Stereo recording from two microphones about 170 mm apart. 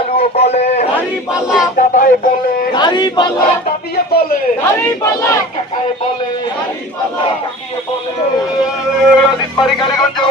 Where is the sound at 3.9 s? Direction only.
65° left (ahead or behind).